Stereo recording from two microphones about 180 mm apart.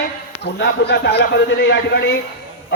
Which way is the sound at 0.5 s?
70° left (ahead or behind).